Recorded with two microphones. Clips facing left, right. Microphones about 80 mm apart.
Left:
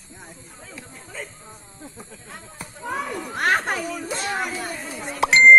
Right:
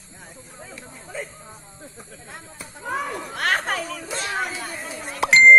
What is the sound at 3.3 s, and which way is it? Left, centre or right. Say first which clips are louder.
Chatter: left 2 dB; left.